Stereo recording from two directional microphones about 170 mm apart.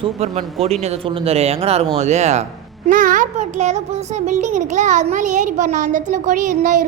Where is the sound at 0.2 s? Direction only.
40° right (ahead or behind).